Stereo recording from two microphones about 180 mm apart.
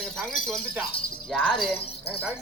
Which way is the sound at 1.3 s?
Centre (ahead or behind).